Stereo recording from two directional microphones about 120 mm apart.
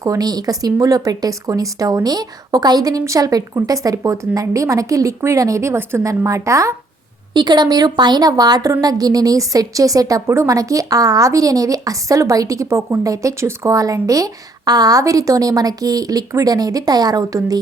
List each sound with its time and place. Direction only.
0.0 s a woman's voice: 30° right (ahead or behind)
7.3 s a woman's voice: 35° right (ahead or behind)